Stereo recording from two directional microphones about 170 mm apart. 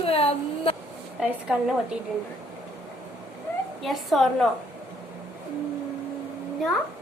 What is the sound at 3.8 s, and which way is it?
Speech, centre (ahead or behind).